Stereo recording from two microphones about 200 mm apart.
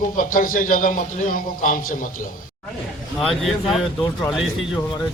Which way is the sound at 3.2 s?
Centre (ahead or behind).